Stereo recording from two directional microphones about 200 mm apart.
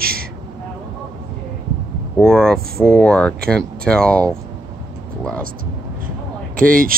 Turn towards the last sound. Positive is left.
turn(degrees=-45)  # may be behind; listen again after turning